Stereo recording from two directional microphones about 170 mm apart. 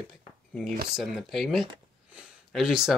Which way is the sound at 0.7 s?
55° right (ahead or behind).